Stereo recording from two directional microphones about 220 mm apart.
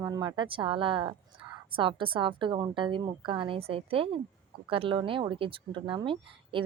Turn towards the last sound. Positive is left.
turn(degrees=-25)  # may be behind; listen again after turning